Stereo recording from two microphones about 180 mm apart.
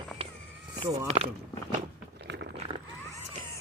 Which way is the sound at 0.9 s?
35° right (ahead or behind).